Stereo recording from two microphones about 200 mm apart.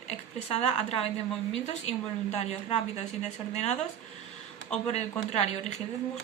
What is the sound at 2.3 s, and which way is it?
Speech, 35° left (ahead or behind).